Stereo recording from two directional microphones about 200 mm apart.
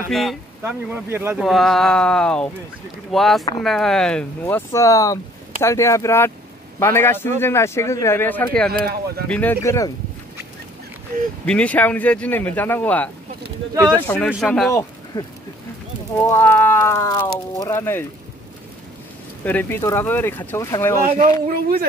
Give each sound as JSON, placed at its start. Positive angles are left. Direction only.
{"t": 0.1, "sound": "speech", "side_deg": 0}
{"t": 0.7, "sound": "speech", "side_deg": -10}
{"t": 1.4, "sound": "speech", "side_deg": 0}
{"t": 8.6, "sound": "speech", "side_deg": -50}
{"t": 9.3, "sound": "speech", "side_deg": 10}
{"t": 11.4, "sound": "speech", "side_deg": 5}
{"t": 14.7, "sound": "speech", "side_deg": 15}
{"t": 19.4, "sound": "speech", "side_deg": 10}
{"t": 21.0, "sound": "speech", "side_deg": -45}